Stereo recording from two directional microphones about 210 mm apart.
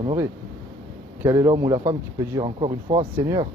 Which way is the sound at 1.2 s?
20° right (ahead or behind).